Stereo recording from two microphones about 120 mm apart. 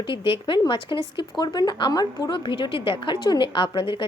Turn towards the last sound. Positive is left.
turn(degrees=45)  # may be behind; listen again after turning